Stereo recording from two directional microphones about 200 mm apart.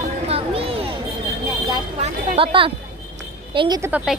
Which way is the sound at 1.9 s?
30° right (ahead or behind).